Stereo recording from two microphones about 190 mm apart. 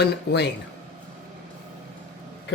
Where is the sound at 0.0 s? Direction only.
65° left (ahead or behind).